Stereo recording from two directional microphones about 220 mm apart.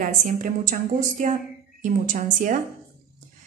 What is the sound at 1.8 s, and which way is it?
Speech, 35° right (ahead or behind).